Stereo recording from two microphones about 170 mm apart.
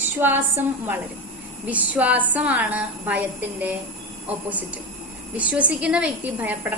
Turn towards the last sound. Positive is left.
turn(degrees=-10)  # may be behind; listen again after turning